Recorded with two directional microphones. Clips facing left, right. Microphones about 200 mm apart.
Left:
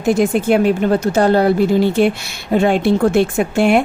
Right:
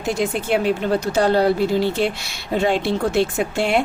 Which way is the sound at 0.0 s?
50° left (ahead or behind).